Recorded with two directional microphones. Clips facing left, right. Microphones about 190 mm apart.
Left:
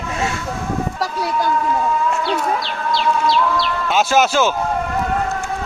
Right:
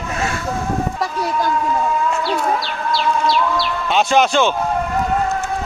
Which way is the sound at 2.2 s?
5° right (ahead or behind).